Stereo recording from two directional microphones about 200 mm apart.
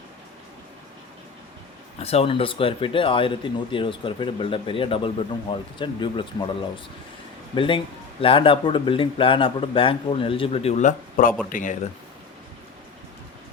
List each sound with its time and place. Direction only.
2.0 s speech: 30° left (ahead or behind)
7.5 s speech: 25° left (ahead or behind)